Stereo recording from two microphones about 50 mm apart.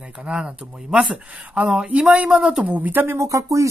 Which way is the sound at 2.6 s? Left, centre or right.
Right.